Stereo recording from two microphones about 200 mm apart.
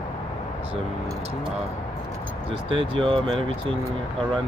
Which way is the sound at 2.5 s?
25° right (ahead or behind).